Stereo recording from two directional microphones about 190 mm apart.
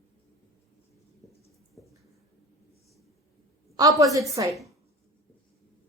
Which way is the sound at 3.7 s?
20° right (ahead or behind).